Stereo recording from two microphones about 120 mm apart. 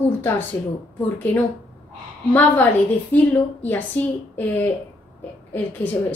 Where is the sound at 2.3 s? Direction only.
15° left (ahead or behind).